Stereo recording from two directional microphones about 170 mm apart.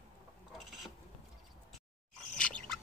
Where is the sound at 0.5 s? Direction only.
Centre (ahead or behind).